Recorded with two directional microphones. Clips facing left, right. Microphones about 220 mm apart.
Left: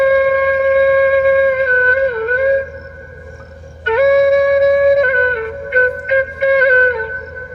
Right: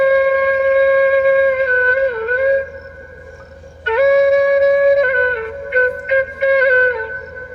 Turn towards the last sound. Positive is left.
turn(degrees=50)  # may be behind; listen again after turning